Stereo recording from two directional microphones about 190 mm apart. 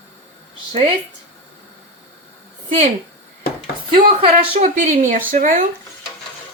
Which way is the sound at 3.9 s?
25° right (ahead or behind).